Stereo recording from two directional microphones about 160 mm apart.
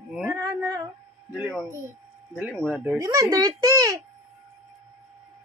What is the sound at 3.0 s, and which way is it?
A child's voice, 20° right (ahead or behind).